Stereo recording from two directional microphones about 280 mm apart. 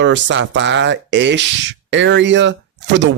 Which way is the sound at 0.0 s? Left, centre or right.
Right.